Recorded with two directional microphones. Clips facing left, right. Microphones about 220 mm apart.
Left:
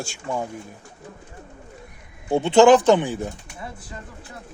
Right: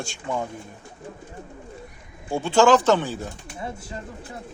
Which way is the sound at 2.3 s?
20° left (ahead or behind).